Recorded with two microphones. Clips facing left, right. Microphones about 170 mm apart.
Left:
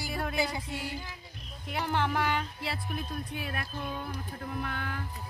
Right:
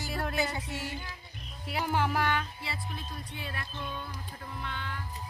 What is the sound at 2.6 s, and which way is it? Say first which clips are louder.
Speech: left 4 dB; 60° left (ahead or behind).